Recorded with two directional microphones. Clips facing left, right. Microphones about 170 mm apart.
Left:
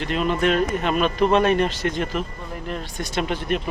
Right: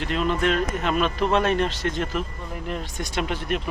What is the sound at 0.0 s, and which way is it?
Speech, 5° left (ahead or behind).